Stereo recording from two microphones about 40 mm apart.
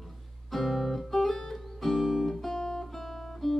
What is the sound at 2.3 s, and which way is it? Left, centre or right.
Guitar, centre.